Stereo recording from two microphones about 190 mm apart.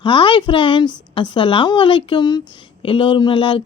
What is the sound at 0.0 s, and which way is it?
A woman's voice, 25° left (ahead or behind).